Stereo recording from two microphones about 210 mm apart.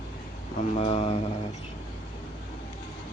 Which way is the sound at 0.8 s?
30° left (ahead or behind).